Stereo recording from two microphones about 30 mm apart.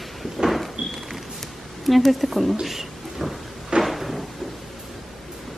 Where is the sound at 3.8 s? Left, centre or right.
Centre.